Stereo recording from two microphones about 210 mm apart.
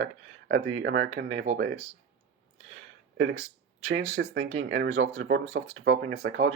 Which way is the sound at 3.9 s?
75° right (ahead or behind).